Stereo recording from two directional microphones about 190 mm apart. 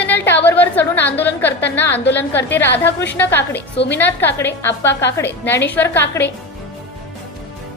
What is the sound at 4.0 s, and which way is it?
A woman's voice, 10° left (ahead or behind).